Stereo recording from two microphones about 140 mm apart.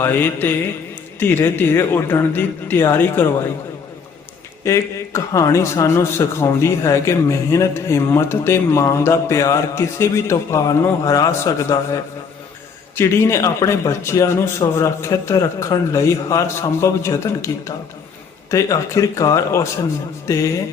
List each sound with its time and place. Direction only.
0.0 s a man's voice: 15° left (ahead or behind)
4.6 s a man's voice: 20° left (ahead or behind)